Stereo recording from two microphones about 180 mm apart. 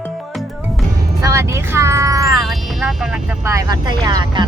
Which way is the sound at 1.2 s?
15° right (ahead or behind).